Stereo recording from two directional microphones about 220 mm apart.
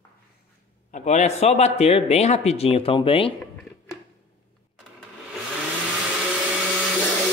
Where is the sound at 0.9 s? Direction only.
35° left (ahead or behind).